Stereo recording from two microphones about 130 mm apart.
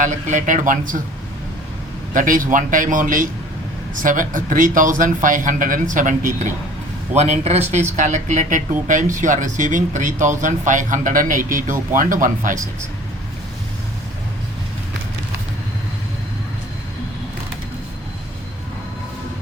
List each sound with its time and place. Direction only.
0.0 s a man's voice: 75° right (ahead or behind); by 1.0 s 90° right
2.1 s a man's voice: 90° right
7.2 s a man's voice: 55° right (ahead or behind)
7.9 s speech: 75° right (ahead or behind); by 8.6 s 90° right
8.9 s a man's voice: 80° right